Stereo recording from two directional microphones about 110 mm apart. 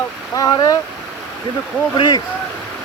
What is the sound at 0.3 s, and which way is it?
Speech, 35° left (ahead or behind).